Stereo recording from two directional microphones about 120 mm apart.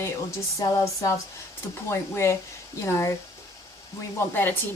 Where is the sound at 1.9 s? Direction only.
20° left (ahead or behind).